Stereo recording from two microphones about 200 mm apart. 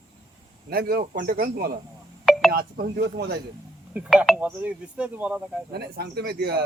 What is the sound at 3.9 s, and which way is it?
Speech, centre (ahead or behind).